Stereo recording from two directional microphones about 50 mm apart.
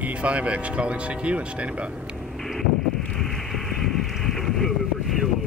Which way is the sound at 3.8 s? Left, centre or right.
Centre.